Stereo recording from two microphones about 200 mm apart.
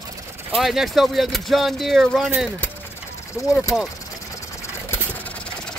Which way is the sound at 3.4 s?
15° left (ahead or behind).